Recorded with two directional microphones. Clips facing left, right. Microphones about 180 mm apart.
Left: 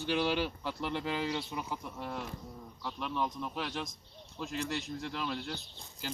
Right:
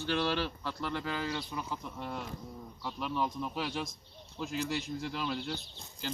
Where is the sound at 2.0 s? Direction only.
Centre (ahead or behind).